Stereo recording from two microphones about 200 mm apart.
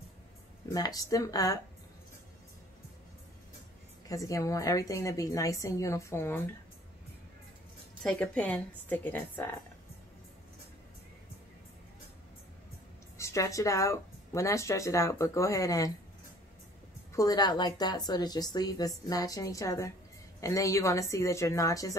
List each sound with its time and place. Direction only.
0.7 s speech: 20° left (ahead or behind)
4.1 s speech: 15° left (ahead or behind)
8.0 s speech: 5° left (ahead or behind)
13.2 s speech: 15° left (ahead or behind)
17.1 s a woman's voice: 20° left (ahead or behind)